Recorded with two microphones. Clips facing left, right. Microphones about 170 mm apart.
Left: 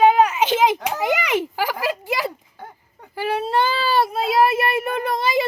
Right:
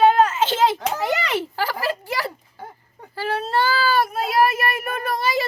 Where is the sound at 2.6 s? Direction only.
5° right (ahead or behind).